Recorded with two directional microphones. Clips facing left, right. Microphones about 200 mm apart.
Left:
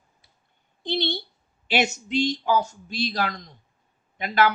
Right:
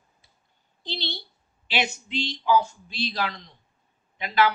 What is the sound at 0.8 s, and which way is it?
Speech, 50° left (ahead or behind).